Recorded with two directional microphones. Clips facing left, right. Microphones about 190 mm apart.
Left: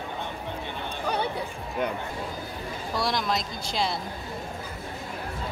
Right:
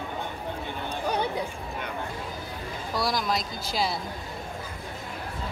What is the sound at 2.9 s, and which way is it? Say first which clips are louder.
Speech: even; centre (ahead or behind).